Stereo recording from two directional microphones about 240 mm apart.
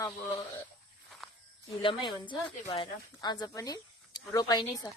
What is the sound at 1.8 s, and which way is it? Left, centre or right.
Speech, left.